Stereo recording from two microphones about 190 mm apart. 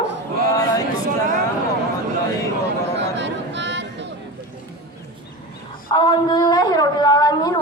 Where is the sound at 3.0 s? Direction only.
65° right (ahead or behind).